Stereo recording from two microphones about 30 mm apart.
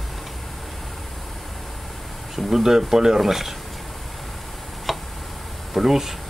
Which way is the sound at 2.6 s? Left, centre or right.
Centre.